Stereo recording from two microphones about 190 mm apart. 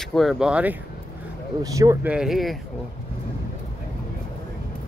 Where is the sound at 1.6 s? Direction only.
20° right (ahead or behind).